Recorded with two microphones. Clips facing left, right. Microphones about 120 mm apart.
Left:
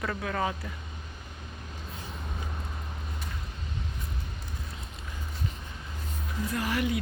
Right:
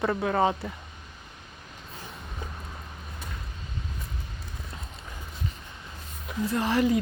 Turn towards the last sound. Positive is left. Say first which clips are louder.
# right 5 dB
turn(degrees=-35)  # may be behind; listen again after turning